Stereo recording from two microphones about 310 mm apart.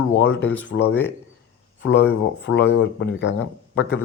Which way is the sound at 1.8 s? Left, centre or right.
Left.